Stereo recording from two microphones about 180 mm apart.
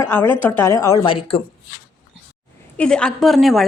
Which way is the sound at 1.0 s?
30° left (ahead or behind).